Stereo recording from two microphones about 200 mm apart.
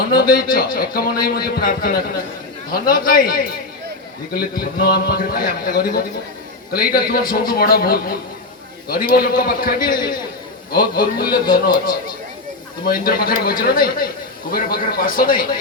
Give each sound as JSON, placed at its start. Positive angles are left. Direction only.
{"t": 0.1, "sound": "speech", "side_deg": 50}